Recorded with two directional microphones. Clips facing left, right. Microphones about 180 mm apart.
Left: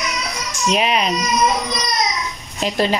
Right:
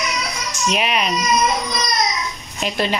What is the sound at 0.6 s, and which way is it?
Speech, 30° left (ahead or behind).